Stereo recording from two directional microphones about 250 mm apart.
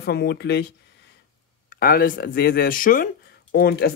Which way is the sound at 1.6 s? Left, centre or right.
Left.